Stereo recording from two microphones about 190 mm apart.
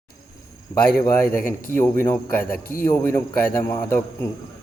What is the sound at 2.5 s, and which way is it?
Speech, 50° left (ahead or behind).